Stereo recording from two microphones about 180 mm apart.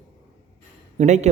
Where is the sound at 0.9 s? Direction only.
40° right (ahead or behind).